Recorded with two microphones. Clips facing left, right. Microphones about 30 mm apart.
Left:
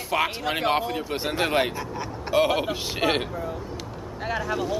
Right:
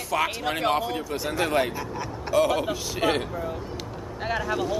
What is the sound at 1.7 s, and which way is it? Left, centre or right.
Speech, centre.